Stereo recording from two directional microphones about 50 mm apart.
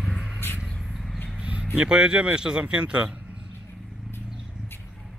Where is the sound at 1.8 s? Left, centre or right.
Centre.